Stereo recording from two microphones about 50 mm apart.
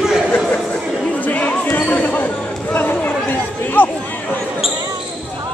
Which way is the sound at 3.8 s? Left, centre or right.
Left.